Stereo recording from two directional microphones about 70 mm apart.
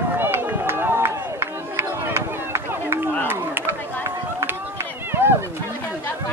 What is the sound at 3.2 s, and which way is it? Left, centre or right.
Chop, right.